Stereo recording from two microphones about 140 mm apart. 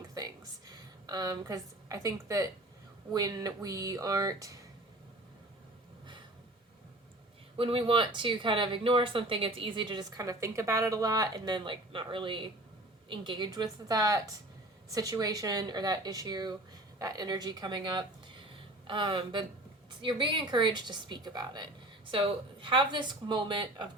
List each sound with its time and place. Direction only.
0.7 s a woman's voice: 30° right (ahead or behind)
7.5 s speech: 40° right (ahead or behind)